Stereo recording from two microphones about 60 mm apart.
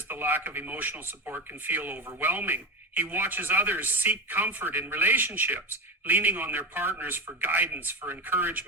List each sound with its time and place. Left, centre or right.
0.1 s speech: right